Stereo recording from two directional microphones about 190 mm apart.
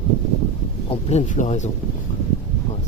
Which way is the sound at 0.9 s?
35° left (ahead or behind).